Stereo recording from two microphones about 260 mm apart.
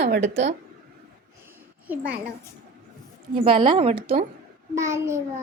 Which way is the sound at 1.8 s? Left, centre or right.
Centre.